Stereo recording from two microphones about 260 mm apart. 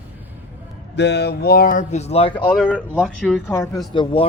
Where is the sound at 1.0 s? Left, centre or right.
Left; by 2.5 s centre.